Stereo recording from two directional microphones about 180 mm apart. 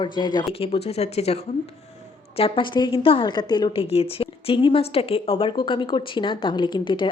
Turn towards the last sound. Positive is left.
turn(degrees=25)  # may be behind; listen again after turning